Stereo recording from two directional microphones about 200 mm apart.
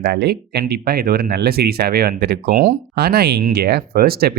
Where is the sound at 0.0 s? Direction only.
50° right (ahead or behind).